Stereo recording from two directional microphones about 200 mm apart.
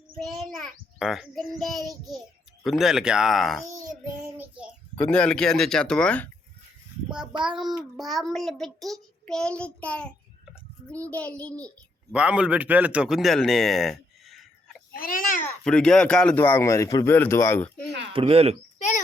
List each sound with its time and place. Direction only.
0.2 s a child's voice: centre (ahead or behind)
3.7 s child singing: 15° right (ahead or behind)
4.9 s a child's voice: 5° left (ahead or behind)
7.4 s a child's voice: centre (ahead or behind)
12.1 s speech: 5° right (ahead or behind)
14.9 s speech: 45° left (ahead or behind)
15.4 s speech: 5° left (ahead or behind)
18.1 s speech: 25° right (ahead or behind)